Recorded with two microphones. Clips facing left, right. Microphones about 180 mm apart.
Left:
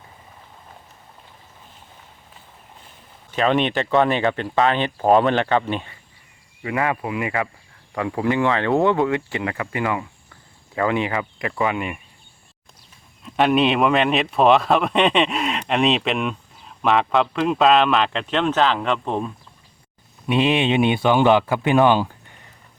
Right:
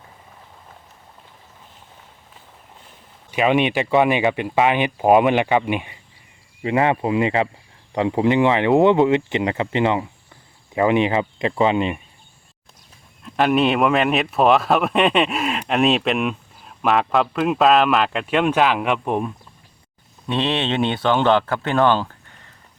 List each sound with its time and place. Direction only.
3.3 s speech: 10° right (ahead or behind)
6.6 s speech: 25° right (ahead or behind)
13.2 s speech: centre (ahead or behind)
20.2 s speech: 10° left (ahead or behind)